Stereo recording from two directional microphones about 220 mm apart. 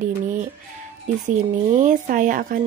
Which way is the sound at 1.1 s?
35° right (ahead or behind).